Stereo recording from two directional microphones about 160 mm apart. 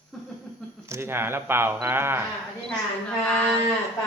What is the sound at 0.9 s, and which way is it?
Speech, 15° right (ahead or behind).